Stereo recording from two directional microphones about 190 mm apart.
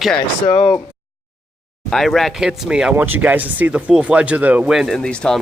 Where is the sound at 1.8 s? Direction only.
Centre (ahead or behind).